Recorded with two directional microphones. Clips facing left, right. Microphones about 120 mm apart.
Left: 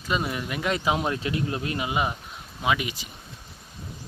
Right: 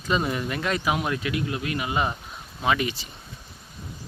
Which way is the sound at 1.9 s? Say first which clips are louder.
Right 1 dB; 10° left (ahead or behind).